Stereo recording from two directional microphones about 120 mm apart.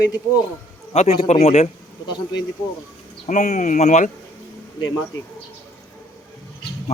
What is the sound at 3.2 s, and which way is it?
Speech, 90° left.